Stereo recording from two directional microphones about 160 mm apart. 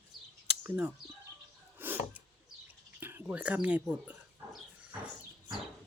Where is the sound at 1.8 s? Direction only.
10° right (ahead or behind).